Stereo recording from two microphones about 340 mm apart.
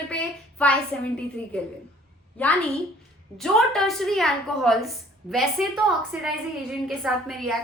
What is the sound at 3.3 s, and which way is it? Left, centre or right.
A woman's voice, centre.